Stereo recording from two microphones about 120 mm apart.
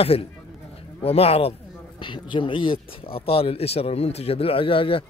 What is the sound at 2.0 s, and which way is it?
A man's voice, 45° left (ahead or behind).